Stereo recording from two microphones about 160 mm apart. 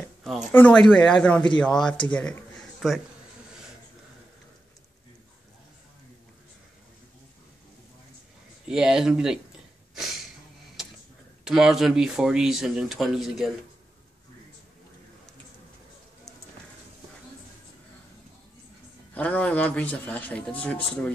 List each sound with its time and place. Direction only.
0.5 s a man's voice: 10° left (ahead or behind)
8.6 s speech: 5° right (ahead or behind)
11.4 s speech: centre (ahead or behind)
19.1 s a man's voice: 10° left (ahead or behind)